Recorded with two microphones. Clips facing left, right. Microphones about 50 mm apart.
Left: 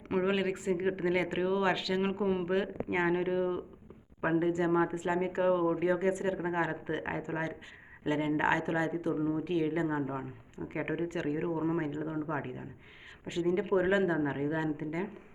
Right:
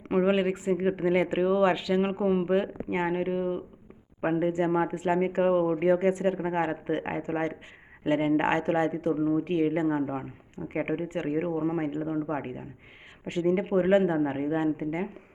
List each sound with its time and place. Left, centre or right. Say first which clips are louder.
0.1 s speech: right 6 dB; centre
4.2 s speech: right 3 dB; right
10.9 s speech: right 3 dB; right
11.3 s speech: right 5 dB; right
13.2 s speech: right 4 dB; right
13.7 s speech: right 5 dB; right